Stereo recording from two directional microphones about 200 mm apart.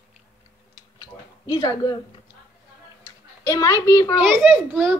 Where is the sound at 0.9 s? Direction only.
20° left (ahead or behind).